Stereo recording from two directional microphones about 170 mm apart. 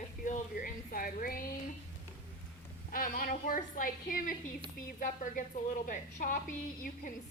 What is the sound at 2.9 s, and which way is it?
A woman's voice, 55° left (ahead or behind).